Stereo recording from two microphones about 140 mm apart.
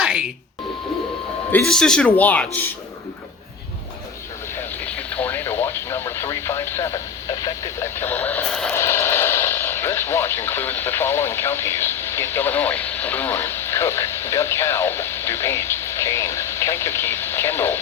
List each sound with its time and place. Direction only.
0.0 s beep: 5° right (ahead or behind)
1.5 s speech: 10° left (ahead or behind)
4.8 s radio: 10° left (ahead or behind)
8.7 s speech: 15° left (ahead or behind)